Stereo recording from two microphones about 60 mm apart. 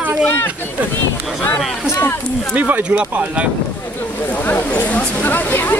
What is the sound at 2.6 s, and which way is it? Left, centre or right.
Speech, right.